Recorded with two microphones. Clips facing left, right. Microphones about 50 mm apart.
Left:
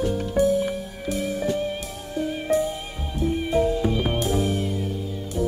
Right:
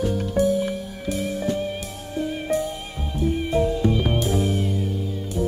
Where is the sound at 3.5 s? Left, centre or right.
Centre.